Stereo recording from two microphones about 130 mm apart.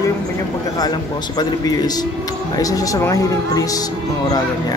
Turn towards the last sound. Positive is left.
turn(degrees=25)  # may be behind; listen again after turning